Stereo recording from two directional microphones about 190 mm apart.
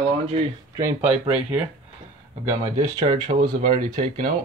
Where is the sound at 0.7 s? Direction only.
10° right (ahead or behind).